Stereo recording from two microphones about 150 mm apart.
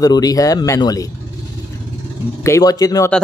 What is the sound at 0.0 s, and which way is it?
Speech, 25° left (ahead or behind).